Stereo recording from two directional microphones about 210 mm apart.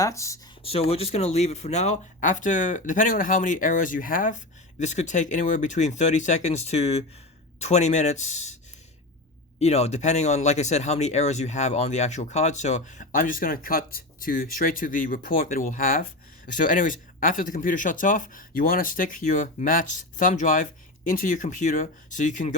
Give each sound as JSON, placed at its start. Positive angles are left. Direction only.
{"t": 0.0, "sound": "speech", "side_deg": 15}
{"t": 0.6, "sound": "speech", "side_deg": 30}
{"t": 9.6, "sound": "speech", "side_deg": 30}